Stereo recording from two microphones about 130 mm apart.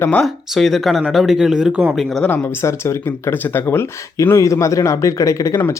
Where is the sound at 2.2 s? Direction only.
20° left (ahead or behind).